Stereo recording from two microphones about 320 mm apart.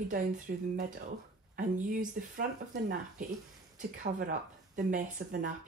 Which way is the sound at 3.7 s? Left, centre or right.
Right.